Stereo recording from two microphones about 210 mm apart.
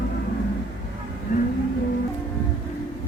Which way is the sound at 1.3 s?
35° left (ahead or behind).